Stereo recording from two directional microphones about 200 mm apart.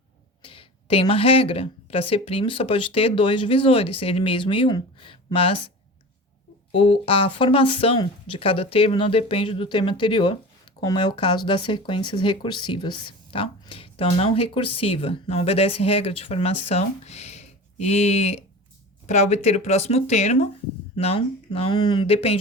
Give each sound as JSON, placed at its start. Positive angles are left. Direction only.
{"t": 0.4, "sound": "speech", "side_deg": 25}
{"t": 6.7, "sound": "speech", "side_deg": 25}